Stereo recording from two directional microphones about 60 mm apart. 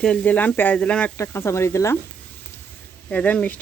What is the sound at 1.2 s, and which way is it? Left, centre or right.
Speech, left.